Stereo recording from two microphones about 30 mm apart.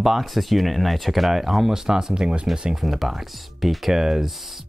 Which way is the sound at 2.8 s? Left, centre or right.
Centre.